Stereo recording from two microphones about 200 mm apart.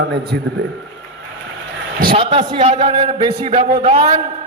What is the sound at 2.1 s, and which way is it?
A man's voice, 30° right (ahead or behind).